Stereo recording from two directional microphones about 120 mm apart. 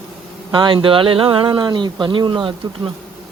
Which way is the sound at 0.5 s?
40° right (ahead or behind).